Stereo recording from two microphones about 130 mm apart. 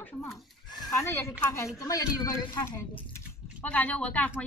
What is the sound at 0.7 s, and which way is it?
Neigh, 30° left (ahead or behind).